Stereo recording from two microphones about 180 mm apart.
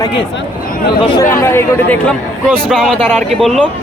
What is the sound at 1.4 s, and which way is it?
Speech, 10° left (ahead or behind).